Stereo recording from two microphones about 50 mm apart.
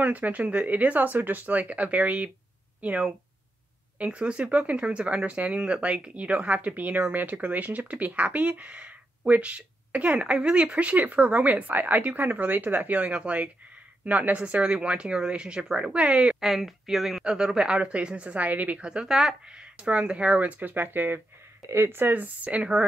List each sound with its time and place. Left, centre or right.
0.0 s speech: right
16.3 s speech: centre
17.2 s speech: centre; by 18.8 s right
18.8 s speech: centre; by 21.2 s right
21.6 s speech: right